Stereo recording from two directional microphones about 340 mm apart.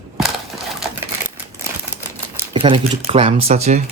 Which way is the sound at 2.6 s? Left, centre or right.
Centre.